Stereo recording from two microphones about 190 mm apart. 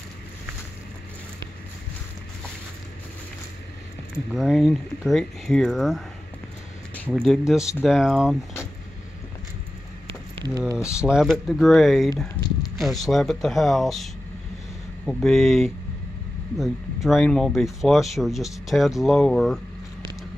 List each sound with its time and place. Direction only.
4.3 s speech: centre (ahead or behind)
7.1 s speech: centre (ahead or behind)
10.3 s a sound: 20° right (ahead or behind)
10.9 s speech: 5° right (ahead or behind)
15.0 s speech: centre (ahead or behind)